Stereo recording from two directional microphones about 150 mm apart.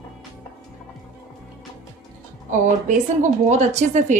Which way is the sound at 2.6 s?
55° right (ahead or behind).